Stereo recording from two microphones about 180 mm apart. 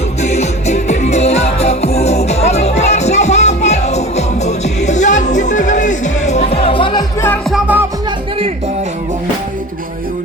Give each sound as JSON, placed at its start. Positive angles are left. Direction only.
{"t": 0.2, "sound": "music", "side_deg": 40}
{"t": 7.5, "sound": "music", "side_deg": -10}